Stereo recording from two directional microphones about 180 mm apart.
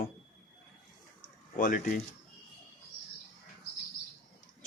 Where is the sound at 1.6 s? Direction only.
50° left (ahead or behind).